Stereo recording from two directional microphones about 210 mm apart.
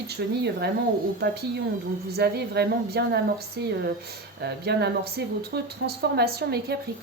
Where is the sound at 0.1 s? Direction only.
50° right (ahead or behind).